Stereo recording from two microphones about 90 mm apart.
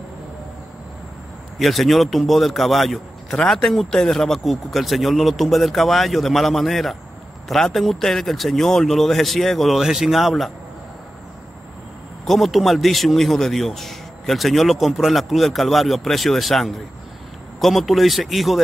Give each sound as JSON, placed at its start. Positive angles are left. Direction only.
{"t": 1.6, "sound": "a man's voice", "side_deg": 0}
{"t": 12.3, "sound": "a man's voice", "side_deg": 0}